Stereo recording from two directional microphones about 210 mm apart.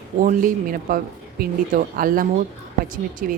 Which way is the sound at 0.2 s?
40° right (ahead or behind).